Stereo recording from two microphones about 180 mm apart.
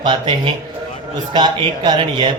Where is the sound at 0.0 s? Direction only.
25° right (ahead or behind).